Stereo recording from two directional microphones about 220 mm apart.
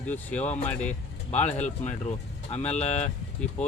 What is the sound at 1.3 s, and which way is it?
Speech, 30° left (ahead or behind).